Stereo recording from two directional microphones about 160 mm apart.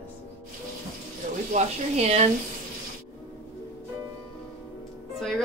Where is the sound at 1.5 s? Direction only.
45° right (ahead or behind).